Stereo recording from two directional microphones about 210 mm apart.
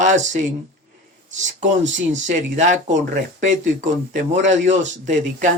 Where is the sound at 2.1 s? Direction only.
35° right (ahead or behind).